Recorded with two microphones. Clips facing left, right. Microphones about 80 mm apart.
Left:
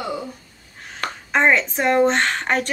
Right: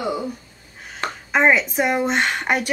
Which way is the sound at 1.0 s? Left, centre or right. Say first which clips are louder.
Right 1 dB; right.